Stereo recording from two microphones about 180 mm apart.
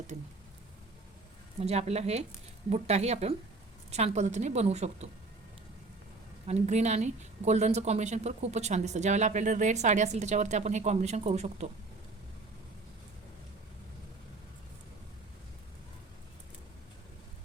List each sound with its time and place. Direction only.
1.6 s a woman's voice: 35° right (ahead or behind)
6.5 s a woman's voice: 40° right (ahead or behind)